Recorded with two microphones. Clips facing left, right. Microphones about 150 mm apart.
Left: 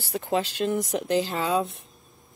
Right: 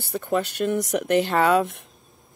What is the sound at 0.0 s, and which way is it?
Speech, 55° right (ahead or behind).